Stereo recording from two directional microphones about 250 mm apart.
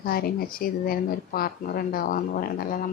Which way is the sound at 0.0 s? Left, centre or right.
Left.